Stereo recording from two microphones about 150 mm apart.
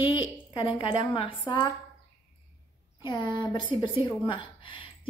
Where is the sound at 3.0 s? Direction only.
30° left (ahead or behind).